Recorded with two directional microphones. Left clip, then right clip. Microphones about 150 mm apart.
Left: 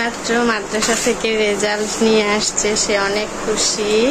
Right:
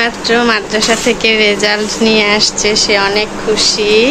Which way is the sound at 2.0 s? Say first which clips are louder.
Right 6 dB; 15° left (ahead or behind).